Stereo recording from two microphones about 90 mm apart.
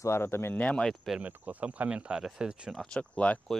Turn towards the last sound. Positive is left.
turn(degrees=15)  # may be behind; listen again after turning